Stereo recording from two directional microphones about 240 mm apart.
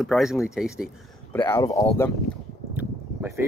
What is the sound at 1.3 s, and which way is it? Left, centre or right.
Speech, centre.